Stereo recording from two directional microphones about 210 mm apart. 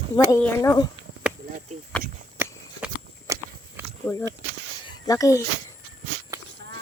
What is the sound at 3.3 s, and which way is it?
Biting, 15° right (ahead or behind).